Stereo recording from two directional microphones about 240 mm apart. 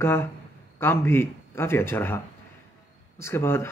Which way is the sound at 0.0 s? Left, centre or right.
Centre.